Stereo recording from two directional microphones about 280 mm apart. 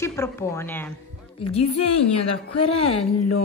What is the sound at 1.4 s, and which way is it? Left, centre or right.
Speech, left.